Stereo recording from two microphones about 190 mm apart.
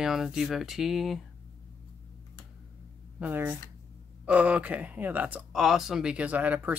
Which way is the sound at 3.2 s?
10° right (ahead or behind).